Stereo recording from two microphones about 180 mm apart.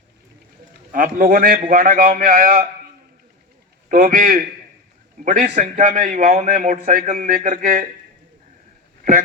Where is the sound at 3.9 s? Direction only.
50° right (ahead or behind).